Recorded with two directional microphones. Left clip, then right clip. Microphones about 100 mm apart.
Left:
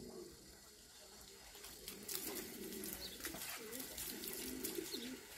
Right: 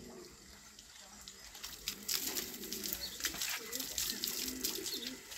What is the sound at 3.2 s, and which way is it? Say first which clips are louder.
Bird: right 12 dB; 20° right (ahead or behind).